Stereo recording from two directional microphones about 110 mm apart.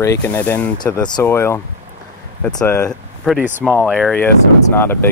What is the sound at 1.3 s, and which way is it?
Speech, 20° left (ahead or behind).